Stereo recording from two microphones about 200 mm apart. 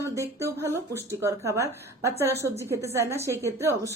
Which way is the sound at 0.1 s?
15° right (ahead or behind).